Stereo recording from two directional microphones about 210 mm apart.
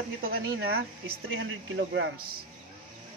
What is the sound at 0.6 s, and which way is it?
Speech, 50° right (ahead or behind).